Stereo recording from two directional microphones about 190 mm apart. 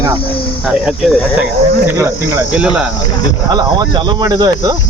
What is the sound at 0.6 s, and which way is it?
Speech, 5° right (ahead or behind).